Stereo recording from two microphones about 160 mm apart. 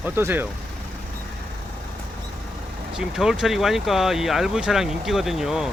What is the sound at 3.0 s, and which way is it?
Speech, 5° right (ahead or behind).